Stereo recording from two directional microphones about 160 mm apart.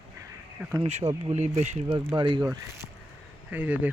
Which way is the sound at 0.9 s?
40° right (ahead or behind).